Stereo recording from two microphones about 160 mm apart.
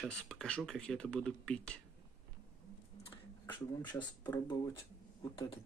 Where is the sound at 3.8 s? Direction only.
30° left (ahead or behind).